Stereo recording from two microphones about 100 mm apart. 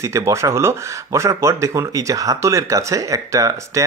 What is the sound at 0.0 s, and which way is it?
Speech, 30° right (ahead or behind).